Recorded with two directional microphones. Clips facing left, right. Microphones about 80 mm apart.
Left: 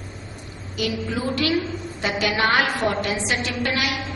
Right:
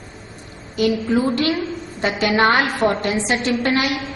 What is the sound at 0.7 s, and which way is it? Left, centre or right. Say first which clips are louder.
A woman's voice: right 8 dB; right.